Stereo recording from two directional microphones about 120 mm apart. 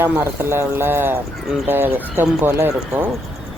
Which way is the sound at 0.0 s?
20° right (ahead or behind).